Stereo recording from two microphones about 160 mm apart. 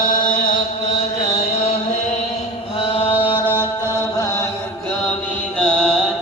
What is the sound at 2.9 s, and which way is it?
Chant, 35° left (ahead or behind).